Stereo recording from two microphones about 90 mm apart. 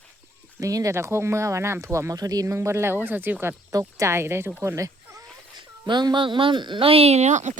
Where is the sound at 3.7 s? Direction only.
40° right (ahead or behind).